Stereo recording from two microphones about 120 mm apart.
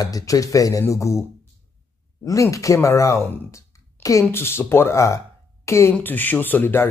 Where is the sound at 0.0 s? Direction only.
30° left (ahead or behind).